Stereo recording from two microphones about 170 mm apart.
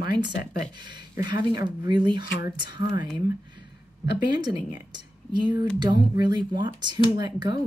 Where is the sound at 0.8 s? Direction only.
25° right (ahead or behind).